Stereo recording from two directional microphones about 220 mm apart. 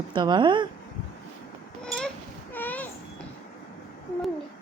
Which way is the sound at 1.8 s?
5° left (ahead or behind).